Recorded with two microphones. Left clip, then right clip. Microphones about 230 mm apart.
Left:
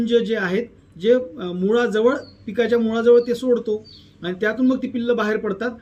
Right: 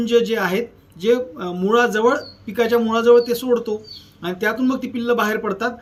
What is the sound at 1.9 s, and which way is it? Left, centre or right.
Speech, right.